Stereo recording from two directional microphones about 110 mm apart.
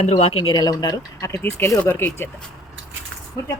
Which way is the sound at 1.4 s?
20° left (ahead or behind).